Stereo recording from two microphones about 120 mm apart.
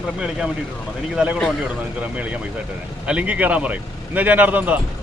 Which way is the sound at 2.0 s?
10° right (ahead or behind).